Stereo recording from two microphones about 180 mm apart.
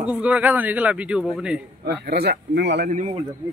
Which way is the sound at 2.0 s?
60° right (ahead or behind).